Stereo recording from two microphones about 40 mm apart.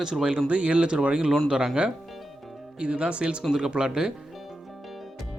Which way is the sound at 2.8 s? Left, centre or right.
Right.